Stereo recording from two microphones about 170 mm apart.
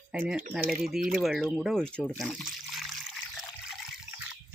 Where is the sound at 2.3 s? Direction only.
Centre (ahead or behind).